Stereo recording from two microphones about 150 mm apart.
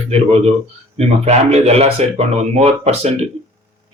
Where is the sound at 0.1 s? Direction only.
45° right (ahead or behind).